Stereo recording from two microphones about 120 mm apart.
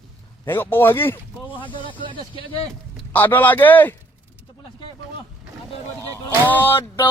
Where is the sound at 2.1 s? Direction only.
45° left (ahead or behind).